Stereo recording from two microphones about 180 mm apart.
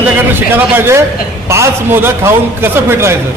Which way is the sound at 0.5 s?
10° right (ahead or behind).